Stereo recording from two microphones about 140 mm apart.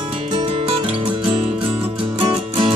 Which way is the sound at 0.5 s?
40° right (ahead or behind).